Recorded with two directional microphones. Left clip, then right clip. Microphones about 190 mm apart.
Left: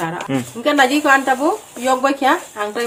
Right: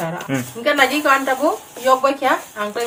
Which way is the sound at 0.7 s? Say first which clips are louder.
Left 3 dB; 40° left (ahead or behind).